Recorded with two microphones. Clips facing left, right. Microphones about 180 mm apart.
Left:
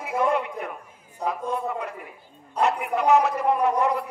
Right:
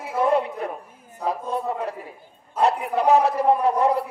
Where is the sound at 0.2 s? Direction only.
35° right (ahead or behind).